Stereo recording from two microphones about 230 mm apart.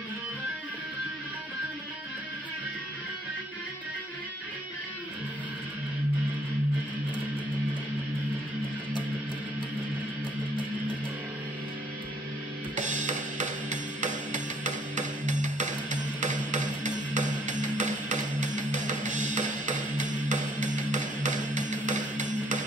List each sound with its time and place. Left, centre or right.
12.7 s music: right